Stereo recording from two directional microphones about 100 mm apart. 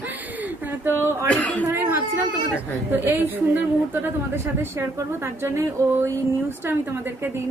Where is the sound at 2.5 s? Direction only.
25° right (ahead or behind).